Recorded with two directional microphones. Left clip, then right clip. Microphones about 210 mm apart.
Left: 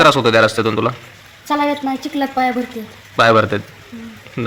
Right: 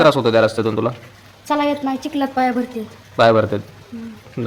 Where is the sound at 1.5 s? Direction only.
25° right (ahead or behind).